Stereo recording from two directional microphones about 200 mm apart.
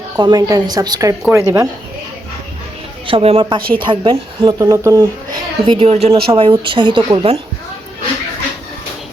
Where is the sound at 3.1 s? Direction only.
25° right (ahead or behind).